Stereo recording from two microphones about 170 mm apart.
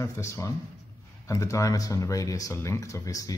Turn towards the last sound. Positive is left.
turn(degrees=20)  # may be behind; listen again after turning